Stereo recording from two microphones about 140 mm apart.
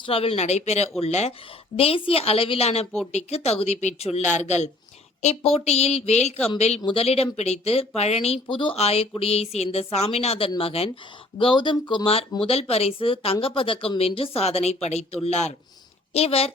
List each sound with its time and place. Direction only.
0.0 s speech: 45° left (ahead or behind)